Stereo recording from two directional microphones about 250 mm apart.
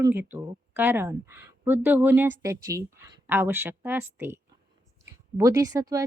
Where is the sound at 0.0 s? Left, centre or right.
Centre.